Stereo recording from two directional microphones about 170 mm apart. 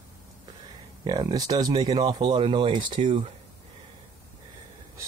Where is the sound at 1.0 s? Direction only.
25° right (ahead or behind).